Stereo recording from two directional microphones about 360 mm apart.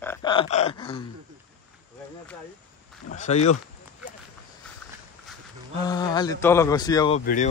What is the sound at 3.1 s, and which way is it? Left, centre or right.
Speech, centre.